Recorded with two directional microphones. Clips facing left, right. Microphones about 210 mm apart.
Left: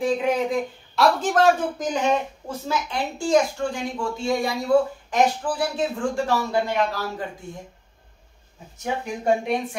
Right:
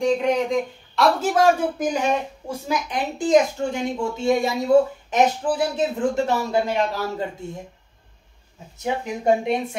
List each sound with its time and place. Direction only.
0.0 s speech: 5° left (ahead or behind)
1.2 s a woman's voice: 10° right (ahead or behind)
8.8 s a woman's voice: 20° right (ahead or behind)